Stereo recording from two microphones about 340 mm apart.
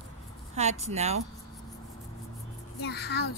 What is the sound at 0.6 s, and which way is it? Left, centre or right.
Speech, centre.